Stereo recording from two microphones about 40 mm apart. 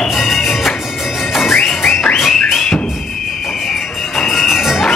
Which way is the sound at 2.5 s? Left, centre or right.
Centre.